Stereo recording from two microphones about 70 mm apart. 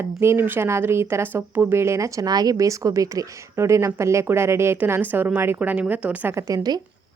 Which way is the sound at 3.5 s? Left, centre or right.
Right.